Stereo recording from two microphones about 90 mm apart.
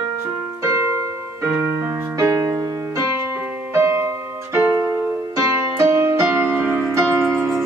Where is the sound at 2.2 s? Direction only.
35° right (ahead or behind).